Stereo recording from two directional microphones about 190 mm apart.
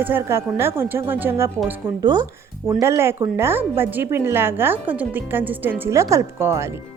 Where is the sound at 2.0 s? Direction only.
20° right (ahead or behind).